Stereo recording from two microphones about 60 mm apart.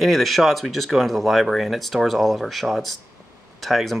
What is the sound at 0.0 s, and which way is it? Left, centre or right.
Speech, centre.